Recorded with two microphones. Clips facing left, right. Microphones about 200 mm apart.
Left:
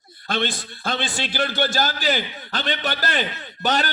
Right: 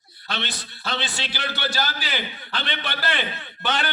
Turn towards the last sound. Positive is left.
turn(degrees=40)  # may be behind; listen again after turning